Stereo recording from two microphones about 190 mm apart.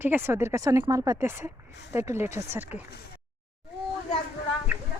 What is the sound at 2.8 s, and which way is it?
Speech, 60° left (ahead or behind).